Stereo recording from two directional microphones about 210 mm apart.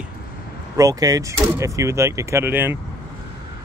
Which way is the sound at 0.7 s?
15° right (ahead or behind).